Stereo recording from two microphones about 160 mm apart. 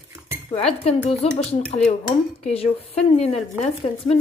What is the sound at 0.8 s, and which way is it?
Dishes, 40° left (ahead or behind).